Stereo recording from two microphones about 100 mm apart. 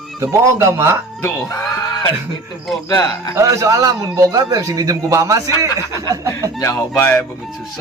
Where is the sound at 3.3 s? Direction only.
35° right (ahead or behind).